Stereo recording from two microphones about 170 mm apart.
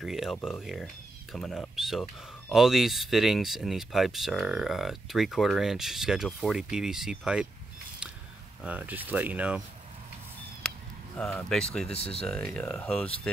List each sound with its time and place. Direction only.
0.0 s speech: centre (ahead or behind)
8.6 s speech: 10° right (ahead or behind)
10.6 s a sound: 5° left (ahead or behind)
11.1 s speech: 5° left (ahead or behind)
11.9 s speech: 35° left (ahead or behind)
12.3 s speech: 5° left (ahead or behind)